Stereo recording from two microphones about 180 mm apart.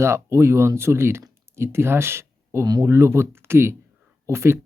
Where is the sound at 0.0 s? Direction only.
15° right (ahead or behind).